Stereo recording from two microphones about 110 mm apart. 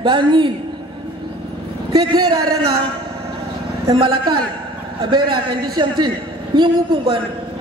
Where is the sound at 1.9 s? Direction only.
35° right (ahead or behind).